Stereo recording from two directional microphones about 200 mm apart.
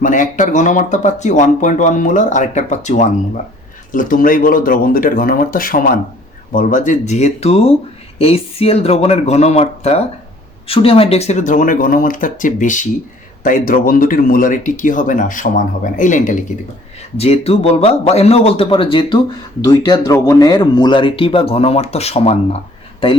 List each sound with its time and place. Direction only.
0.0 s speech: 40° left (ahead or behind)